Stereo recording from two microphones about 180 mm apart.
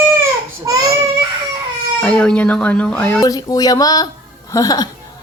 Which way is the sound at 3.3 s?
20° left (ahead or behind).